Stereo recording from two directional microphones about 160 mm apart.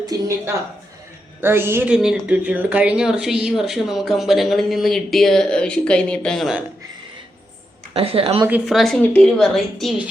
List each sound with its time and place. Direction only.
0.0 s a woman's voice: 20° right (ahead or behind); by 6.7 s centre (ahead or behind)
7.9 s speech: 35° right (ahead or behind)
8.6 s speech: centre (ahead or behind)